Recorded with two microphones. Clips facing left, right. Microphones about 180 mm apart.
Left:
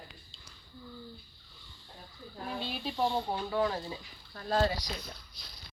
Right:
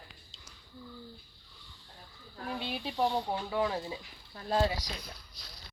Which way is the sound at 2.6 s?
20° right (ahead or behind).